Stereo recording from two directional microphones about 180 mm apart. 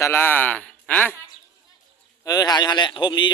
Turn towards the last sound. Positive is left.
turn(degrees=25)  # may be behind; listen again after turning